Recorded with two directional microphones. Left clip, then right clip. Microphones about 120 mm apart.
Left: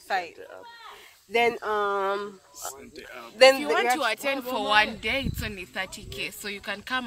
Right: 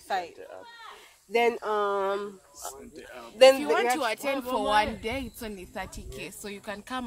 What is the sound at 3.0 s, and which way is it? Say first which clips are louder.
Speech: left 2 dB; 40° right (ahead or behind).